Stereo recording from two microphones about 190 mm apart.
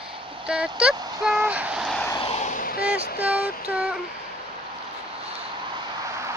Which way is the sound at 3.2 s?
5° right (ahead or behind).